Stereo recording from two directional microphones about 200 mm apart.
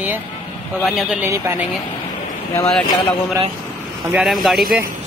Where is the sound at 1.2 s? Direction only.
15° right (ahead or behind).